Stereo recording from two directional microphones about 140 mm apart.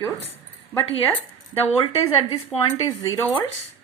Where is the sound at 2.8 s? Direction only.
25° left (ahead or behind).